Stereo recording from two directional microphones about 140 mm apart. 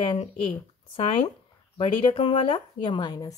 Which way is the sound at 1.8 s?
40° left (ahead or behind).